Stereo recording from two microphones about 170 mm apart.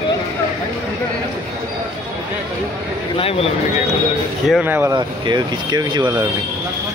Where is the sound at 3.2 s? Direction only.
35° left (ahead or behind).